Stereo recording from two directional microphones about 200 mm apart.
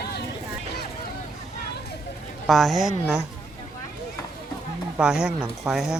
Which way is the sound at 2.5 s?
Centre (ahead or behind).